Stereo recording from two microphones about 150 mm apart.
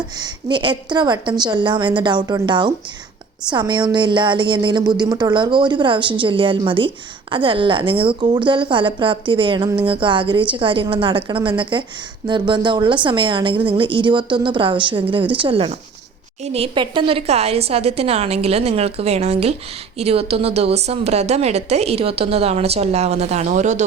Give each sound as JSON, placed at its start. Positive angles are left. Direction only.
{"t": 0.2, "sound": "a woman's voice", "side_deg": -30}